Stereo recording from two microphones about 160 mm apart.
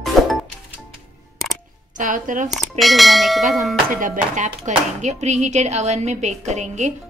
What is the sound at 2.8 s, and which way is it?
Speech, centre (ahead or behind).